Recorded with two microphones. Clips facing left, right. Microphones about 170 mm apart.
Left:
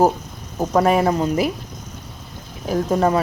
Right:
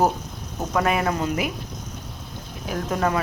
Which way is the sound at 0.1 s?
Centre (ahead or behind).